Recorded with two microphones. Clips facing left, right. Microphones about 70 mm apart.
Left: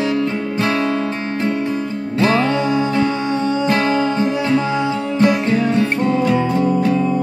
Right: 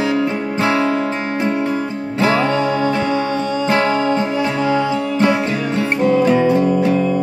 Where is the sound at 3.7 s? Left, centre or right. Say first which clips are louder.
Right 4 dB; right.